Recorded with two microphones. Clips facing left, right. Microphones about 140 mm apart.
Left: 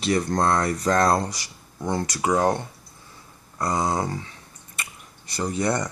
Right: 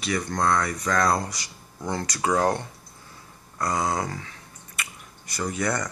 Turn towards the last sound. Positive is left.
turn(degrees=30)  # may be behind; listen again after turning